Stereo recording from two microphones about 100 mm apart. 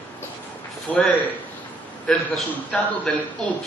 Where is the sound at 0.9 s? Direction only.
15° left (ahead or behind).